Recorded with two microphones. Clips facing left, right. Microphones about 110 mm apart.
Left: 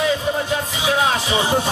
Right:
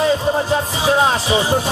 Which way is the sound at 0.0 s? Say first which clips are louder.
Right 4 dB; 35° right (ahead or behind).